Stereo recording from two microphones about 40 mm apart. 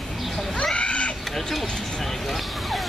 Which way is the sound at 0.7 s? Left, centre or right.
Left.